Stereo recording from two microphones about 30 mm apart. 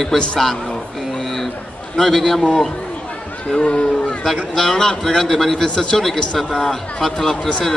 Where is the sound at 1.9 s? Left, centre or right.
Centre.